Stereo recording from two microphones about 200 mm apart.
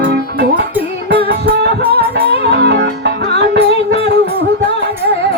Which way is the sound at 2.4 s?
55° right (ahead or behind).